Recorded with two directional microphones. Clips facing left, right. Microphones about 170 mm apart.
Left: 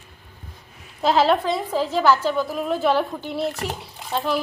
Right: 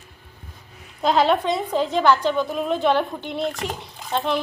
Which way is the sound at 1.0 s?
Centre (ahead or behind).